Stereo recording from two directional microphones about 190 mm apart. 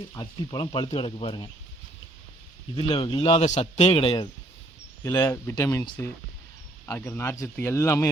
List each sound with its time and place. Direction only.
0.1 s a man's voice: 20° left (ahead or behind)
2.7 s a man's voice: 25° left (ahead or behind)
5.0 s speech: 15° left (ahead or behind)